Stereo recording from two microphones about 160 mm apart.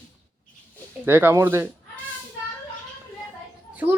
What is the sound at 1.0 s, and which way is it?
Speech, 15° right (ahead or behind).